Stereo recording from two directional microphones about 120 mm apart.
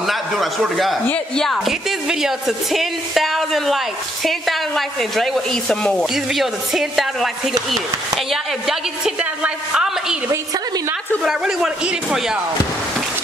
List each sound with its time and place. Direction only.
0.0 s a man's voice: centre (ahead or behind)
10.3 s a woman's voice: 25° right (ahead or behind)
11.2 s speech: 5° right (ahead or behind)